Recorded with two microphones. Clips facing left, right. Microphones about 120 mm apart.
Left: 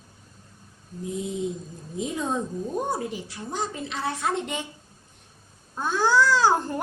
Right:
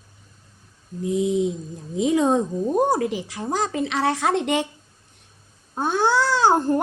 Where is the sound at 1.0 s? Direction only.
85° right.